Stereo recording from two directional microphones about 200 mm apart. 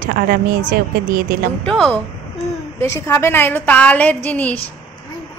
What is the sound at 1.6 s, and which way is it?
A woman's voice, 5° left (ahead or behind).